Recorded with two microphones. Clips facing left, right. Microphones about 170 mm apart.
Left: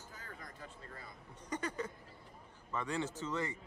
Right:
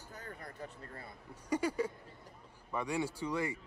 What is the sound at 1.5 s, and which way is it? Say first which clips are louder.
Speech: right 6 dB; 10° right (ahead or behind).